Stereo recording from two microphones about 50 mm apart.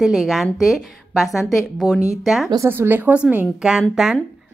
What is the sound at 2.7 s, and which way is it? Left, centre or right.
Speech, right.